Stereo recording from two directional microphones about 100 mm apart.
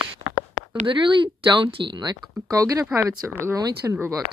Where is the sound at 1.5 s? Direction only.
60° right (ahead or behind).